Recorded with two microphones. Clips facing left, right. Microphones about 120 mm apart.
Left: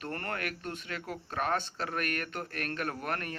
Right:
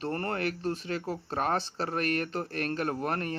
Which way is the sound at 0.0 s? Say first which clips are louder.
Right 6 dB; 30° right (ahead or behind).